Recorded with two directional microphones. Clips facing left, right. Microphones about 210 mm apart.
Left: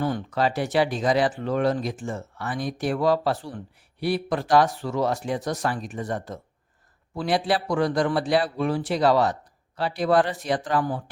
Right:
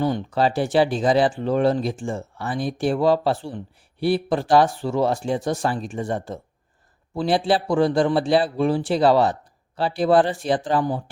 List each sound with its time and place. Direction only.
0.0 s a man's voice: 25° right (ahead or behind)